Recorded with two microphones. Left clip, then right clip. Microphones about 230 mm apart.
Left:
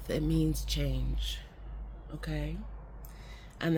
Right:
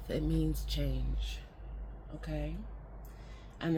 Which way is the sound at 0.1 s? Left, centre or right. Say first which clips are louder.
Left 3 dB; left.